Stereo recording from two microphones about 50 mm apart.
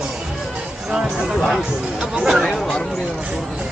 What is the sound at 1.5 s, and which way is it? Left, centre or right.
Speech, centre.